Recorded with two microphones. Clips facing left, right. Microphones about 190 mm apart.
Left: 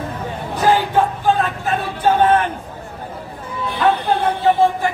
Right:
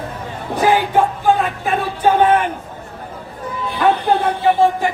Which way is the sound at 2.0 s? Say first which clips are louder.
Right 1 dB; 10° right (ahead or behind).